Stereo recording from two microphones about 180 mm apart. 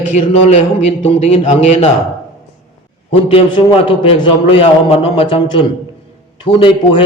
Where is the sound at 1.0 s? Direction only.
30° left (ahead or behind).